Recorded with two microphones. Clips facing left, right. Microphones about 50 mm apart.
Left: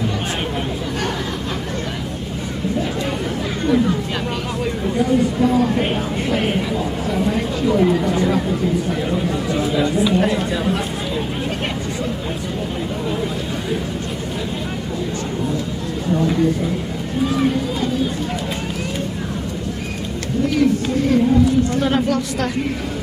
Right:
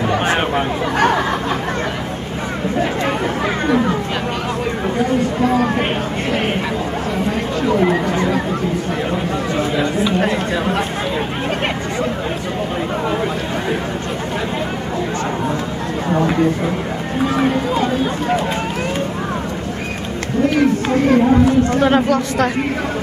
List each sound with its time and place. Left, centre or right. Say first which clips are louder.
0.1 s chatter: right 7 dB; right
3.6 s music: left 1 dB; right
6.3 s chatter: even; right
9.1 s chatter: right 1 dB; right
10.1 s chatter: right 1 dB; right
16.1 s a sound: right 1 dB; right
17.2 s run: right 1 dB; right
20.4 s a sound: right 2 dB; right
21.8 s speech: right 4 dB; right